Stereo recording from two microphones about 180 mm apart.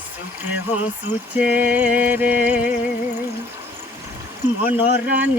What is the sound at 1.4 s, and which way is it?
Music, 10° right (ahead or behind).